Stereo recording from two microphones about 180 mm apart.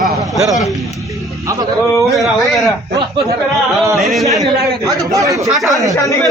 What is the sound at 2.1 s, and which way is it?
Speech, centre (ahead or behind).